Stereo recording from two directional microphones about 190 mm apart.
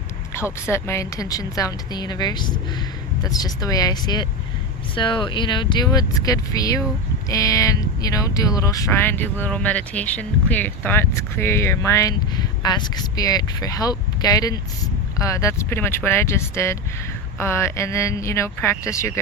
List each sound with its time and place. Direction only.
0.3 s a woman's voice: 15° left (ahead or behind)